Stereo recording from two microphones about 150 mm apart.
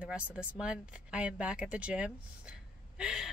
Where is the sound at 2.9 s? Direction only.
5° right (ahead or behind).